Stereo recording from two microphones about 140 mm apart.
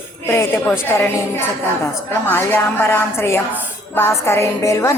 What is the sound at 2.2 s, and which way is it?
A woman's voice, 15° left (ahead or behind).